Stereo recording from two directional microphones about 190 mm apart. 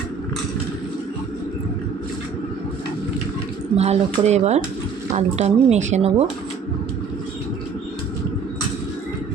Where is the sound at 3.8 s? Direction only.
35° right (ahead or behind).